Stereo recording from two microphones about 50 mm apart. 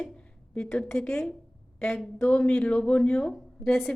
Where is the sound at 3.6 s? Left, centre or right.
Centre.